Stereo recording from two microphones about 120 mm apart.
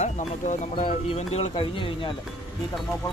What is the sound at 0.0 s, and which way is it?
Speech, 80° left.